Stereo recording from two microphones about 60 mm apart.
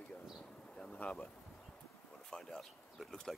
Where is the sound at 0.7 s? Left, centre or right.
Centre.